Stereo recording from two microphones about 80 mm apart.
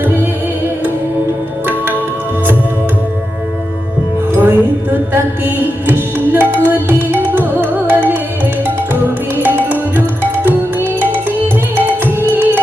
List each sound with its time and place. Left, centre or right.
4.4 s music: right